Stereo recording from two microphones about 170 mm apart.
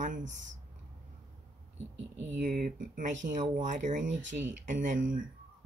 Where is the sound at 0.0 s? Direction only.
45° right (ahead or behind).